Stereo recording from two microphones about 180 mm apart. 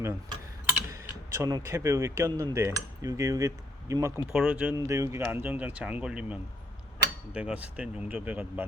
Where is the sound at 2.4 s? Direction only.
15° right (ahead or behind).